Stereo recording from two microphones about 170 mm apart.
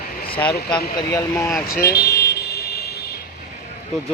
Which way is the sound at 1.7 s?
65° left (ahead or behind).